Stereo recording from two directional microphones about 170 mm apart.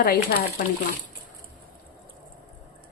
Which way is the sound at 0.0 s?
60° left (ahead or behind).